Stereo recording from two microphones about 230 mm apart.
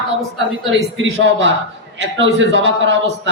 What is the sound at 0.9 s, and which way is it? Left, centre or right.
A man's voice, right.